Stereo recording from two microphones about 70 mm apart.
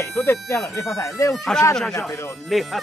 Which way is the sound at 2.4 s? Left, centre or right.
Centre.